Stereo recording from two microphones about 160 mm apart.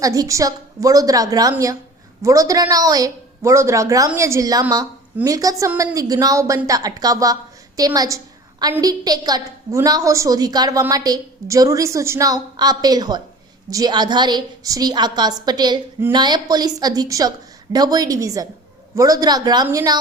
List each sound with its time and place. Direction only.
0.0 s a woman's voice: 20° right (ahead or behind)
7.8 s a sound: 25° right (ahead or behind)
8.8 s a woman's voice: 25° right (ahead or behind)